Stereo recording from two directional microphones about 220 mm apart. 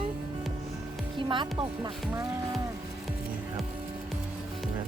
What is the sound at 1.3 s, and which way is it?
Speech, 20° right (ahead or behind).